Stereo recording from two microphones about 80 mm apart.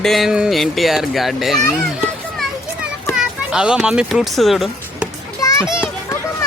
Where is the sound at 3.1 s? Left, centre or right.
Centre.